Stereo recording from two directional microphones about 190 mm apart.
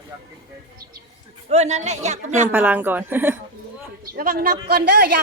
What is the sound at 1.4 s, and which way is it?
Speech, 35° right (ahead or behind).